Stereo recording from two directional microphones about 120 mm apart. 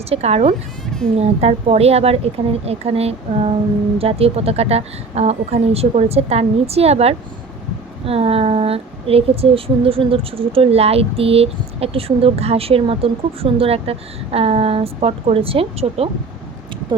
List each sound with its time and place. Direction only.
0.1 s speech: 60° right (ahead or behind)
0.9 s a sound: 5° left (ahead or behind)
1.1 s speech: 55° right (ahead or behind)